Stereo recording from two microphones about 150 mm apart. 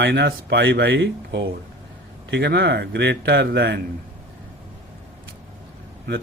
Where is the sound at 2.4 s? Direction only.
90° right.